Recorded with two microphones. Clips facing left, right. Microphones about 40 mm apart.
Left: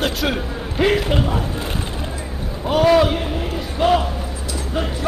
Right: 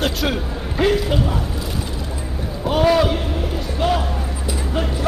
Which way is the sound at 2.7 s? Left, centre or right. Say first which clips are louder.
Left 2 dB; centre.